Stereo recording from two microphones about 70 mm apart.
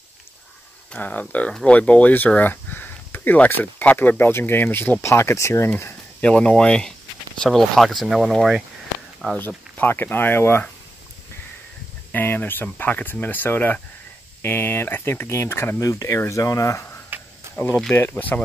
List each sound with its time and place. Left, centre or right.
0.9 s speech: left
5.0 s speech: left
6.2 s speech: centre
9.8 s speech: left
12.1 s speech: left
15.8 s speech: left
17.1 s cricket: right
17.6 s speech: left
17.9 s speech: left